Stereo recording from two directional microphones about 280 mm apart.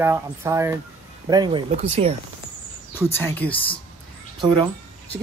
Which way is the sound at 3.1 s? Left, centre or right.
Centre.